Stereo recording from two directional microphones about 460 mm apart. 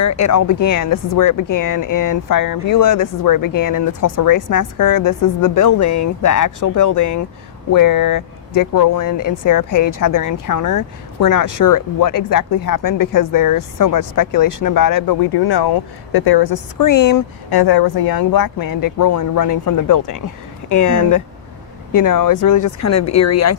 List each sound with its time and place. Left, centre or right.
0.0 s speech: left